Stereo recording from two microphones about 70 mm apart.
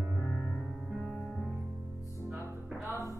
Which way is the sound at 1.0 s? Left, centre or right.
Centre.